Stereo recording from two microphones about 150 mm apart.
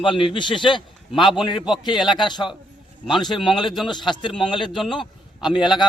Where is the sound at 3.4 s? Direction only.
30° left (ahead or behind).